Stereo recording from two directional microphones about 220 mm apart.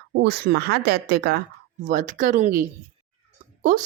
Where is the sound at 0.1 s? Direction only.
45° right (ahead or behind).